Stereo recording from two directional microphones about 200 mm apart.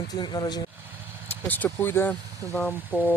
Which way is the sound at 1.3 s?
10° left (ahead or behind).